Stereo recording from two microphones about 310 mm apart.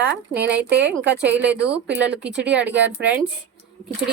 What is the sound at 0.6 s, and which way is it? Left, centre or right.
Speech, right.